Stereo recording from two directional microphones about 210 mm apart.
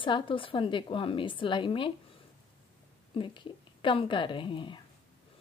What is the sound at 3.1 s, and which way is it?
Speech, 25° left (ahead or behind).